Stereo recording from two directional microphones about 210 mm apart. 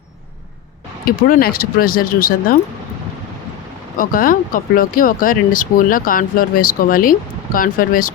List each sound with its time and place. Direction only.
1.0 s speech: 45° left (ahead or behind)
3.9 s speech: 40° left (ahead or behind)